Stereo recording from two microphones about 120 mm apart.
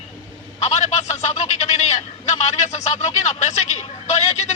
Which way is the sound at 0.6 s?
70° left (ahead or behind).